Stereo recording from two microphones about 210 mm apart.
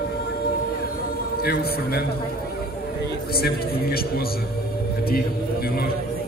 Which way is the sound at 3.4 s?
45° left (ahead or behind).